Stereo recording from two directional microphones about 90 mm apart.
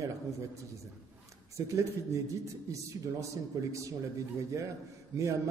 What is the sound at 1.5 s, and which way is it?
A man's voice, 35° right (ahead or behind).